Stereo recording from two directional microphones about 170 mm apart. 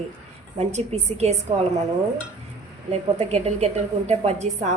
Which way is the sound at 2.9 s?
40° right (ahead or behind).